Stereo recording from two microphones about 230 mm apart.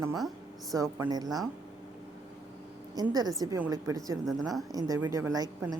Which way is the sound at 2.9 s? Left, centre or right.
Centre.